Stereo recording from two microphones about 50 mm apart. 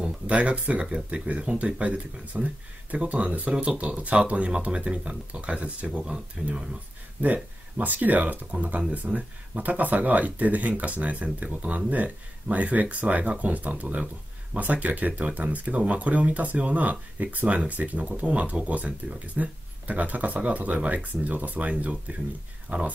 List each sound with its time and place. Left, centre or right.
0.0 s speech: right
7.2 s speech: right